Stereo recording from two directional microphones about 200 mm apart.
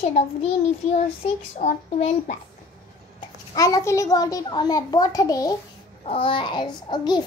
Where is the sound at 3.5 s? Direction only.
15° left (ahead or behind).